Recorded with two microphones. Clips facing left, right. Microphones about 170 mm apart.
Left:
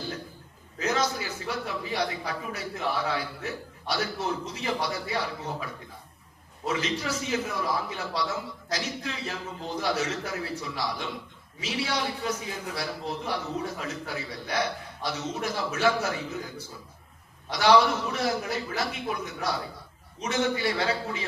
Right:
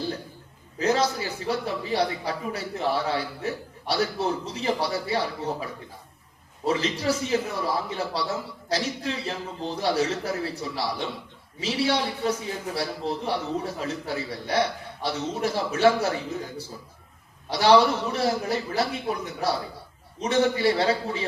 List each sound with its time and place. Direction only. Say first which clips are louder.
0.8 s a man's voice: right 4 dB; 30° right (ahead or behind)
6.7 s a man's voice: right 5 dB; 30° right (ahead or behind)
17.5 s a man's voice: right 3 dB; 30° right (ahead or behind)